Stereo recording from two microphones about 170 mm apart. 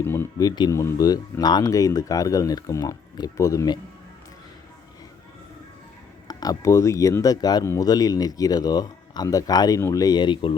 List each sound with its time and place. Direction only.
0.0 s speech: 15° left (ahead or behind)
6.2 s speech: 20° left (ahead or behind)